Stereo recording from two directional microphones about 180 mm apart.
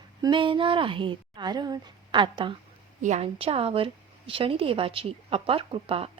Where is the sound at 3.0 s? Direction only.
35° right (ahead or behind).